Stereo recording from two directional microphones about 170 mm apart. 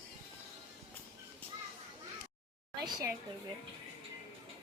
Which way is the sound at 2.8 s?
25° right (ahead or behind).